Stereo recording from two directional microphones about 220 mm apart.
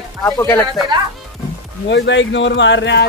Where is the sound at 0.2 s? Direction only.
10° left (ahead or behind).